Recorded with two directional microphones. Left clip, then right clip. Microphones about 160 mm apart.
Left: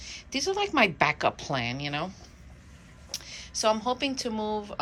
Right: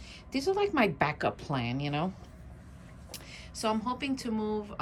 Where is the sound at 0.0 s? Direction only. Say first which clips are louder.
Left 2 dB; centre (ahead or behind).